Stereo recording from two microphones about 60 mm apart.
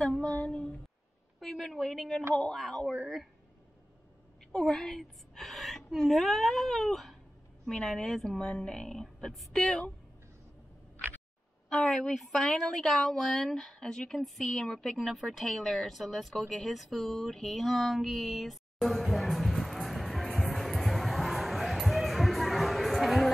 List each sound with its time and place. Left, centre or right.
0.0 s female singing: centre
0.5 s a woman's voice: centre
1.4 s a woman's voice: centre
4.6 s a woman's voice: centre
11.7 s a woman's voice: centre
20.3 s a sound: centre